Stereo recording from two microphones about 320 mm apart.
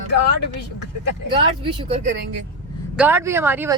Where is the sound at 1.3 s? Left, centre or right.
Centre.